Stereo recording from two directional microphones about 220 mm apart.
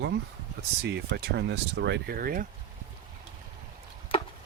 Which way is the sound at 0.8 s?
50° right (ahead or behind).